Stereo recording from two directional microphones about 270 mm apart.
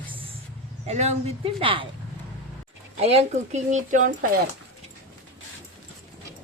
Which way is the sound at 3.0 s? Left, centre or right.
Right.